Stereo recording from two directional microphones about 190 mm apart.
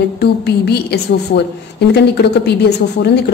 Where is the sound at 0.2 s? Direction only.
60° left (ahead or behind).